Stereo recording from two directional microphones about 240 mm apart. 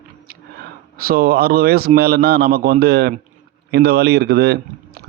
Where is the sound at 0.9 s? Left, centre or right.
Right.